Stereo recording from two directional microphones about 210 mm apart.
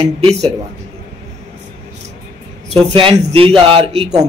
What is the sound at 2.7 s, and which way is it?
A man's voice, 25° right (ahead or behind).